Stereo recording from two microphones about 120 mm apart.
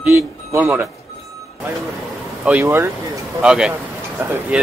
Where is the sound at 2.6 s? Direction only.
25° right (ahead or behind).